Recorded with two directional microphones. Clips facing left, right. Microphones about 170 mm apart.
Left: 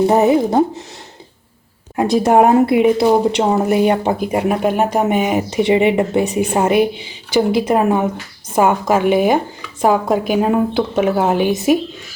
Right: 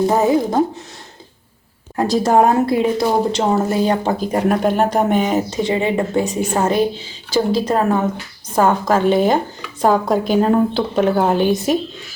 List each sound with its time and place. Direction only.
0.0 s speech: 20° left (ahead or behind)
2.3 s a woman's voice: 15° left (ahead or behind)